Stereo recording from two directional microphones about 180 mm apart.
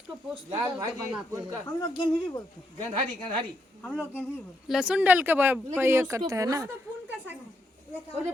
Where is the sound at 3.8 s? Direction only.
10° left (ahead or behind).